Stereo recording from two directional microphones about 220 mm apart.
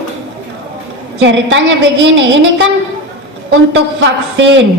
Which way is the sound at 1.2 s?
55° right (ahead or behind).